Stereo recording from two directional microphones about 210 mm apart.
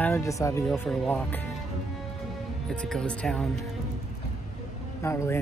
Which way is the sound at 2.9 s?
5° left (ahead or behind).